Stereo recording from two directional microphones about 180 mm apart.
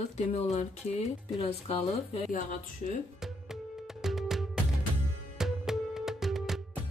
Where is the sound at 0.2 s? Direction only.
40° left (ahead or behind).